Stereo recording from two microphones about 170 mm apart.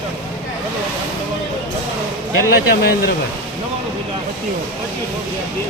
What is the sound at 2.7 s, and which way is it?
Speech, 65° left (ahead or behind).